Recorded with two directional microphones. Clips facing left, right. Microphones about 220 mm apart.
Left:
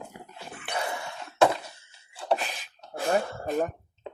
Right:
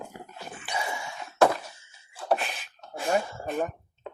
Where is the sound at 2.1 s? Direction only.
35° left (ahead or behind).